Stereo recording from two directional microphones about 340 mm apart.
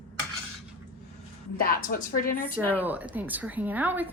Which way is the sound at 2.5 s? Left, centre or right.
Centre.